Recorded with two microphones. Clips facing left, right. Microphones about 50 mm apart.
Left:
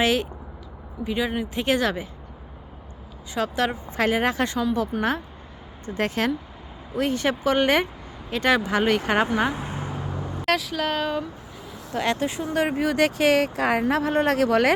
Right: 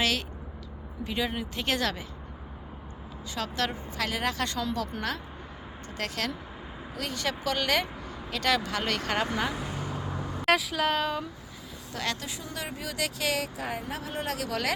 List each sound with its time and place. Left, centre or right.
0.0 s speech: left
1.0 s a woman's voice: centre
3.3 s speech: centre
3.9 s a woman's voice: left
5.8 s speech: left
10.2 s vehicle: centre
10.4 s speech: centre
11.9 s speech: left
13.6 s speech: left
13.8 s speech: left